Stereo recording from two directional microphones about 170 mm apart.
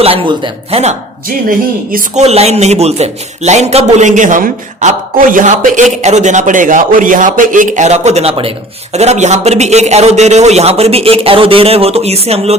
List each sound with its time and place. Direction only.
0.0 s a man's voice: 30° right (ahead or behind)
1.5 s a woman's voice: 55° right (ahead or behind)
2.2 s a man's voice: 40° right (ahead or behind)